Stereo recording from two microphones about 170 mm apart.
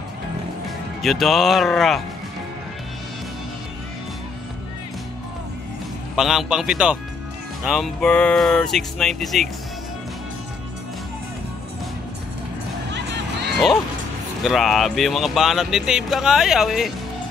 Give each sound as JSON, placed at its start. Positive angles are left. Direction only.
{"t": 1.0, "sound": "speech", "side_deg": 0}
{"t": 6.1, "sound": "speech", "side_deg": 0}
{"t": 12.9, "sound": "music", "side_deg": -85}
{"t": 14.4, "sound": "speech", "side_deg": 0}